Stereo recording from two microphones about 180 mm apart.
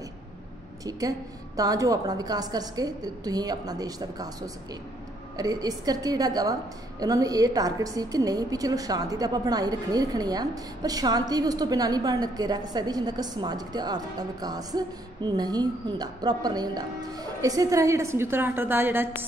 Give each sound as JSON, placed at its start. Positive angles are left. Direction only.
{"t": 0.8, "sound": "a woman's voice", "side_deg": -20}